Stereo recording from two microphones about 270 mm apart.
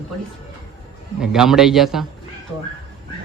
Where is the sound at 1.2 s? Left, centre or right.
Centre.